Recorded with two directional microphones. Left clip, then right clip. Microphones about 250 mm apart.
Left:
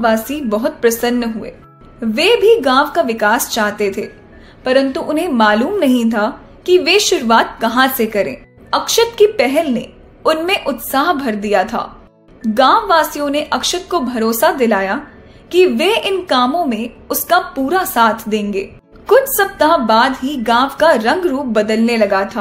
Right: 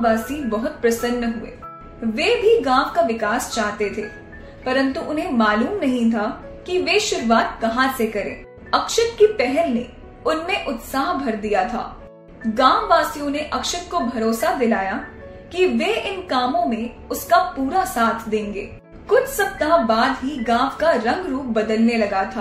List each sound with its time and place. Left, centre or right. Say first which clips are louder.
0.0 s a woman's voice: left 5 dB; left
2.1 s a woman's voice: left 6 dB; left